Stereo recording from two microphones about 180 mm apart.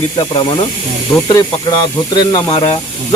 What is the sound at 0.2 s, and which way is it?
Speech, 30° left (ahead or behind).